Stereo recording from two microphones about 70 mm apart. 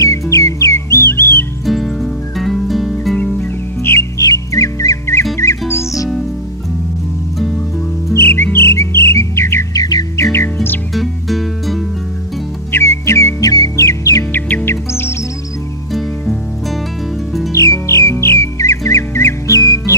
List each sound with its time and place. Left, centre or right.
0.0 s music: left
1.7 s music: centre
3.3 s music: left
4.2 s music: left
8.1 s music: left
9.8 s music: left
10.1 s music: left
11.0 s music: centre
12.7 s music: left
13.4 s music: left
13.8 s music: left
14.3 s music: left
17.5 s squawk: left